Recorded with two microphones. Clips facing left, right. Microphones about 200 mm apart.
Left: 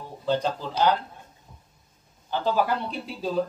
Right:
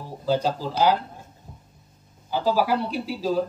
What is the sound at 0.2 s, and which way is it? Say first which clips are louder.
Speech: right 2 dB; 5° right (ahead or behind).